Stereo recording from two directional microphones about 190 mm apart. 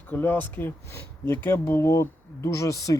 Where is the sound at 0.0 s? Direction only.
10° left (ahead or behind).